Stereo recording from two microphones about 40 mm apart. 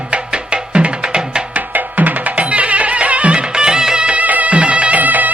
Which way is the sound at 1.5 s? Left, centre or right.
Right.